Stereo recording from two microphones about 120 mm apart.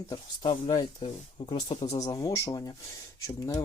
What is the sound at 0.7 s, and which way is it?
Speech, 35° left (ahead or behind).